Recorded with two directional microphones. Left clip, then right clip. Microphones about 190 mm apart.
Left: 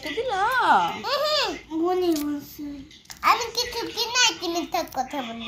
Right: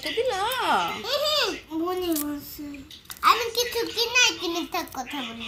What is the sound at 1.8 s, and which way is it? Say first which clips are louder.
Speech: left 5 dB; 15° right (ahead or behind).